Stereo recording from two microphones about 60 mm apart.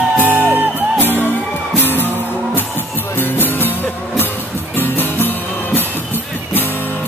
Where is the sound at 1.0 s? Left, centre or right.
Left.